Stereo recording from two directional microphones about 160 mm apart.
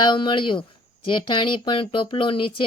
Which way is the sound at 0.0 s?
30° left (ahead or behind).